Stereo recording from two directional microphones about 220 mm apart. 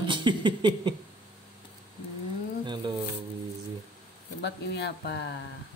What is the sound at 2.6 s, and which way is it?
Music, 20° right (ahead or behind).